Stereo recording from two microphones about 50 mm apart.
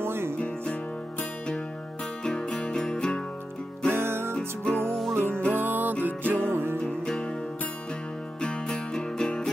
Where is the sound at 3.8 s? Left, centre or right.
Right.